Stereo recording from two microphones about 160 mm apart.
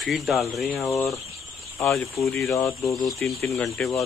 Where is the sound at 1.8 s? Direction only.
15° left (ahead or behind).